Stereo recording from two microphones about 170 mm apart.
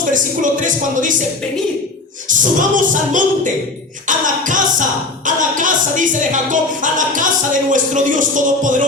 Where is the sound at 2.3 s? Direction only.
50° right (ahead or behind).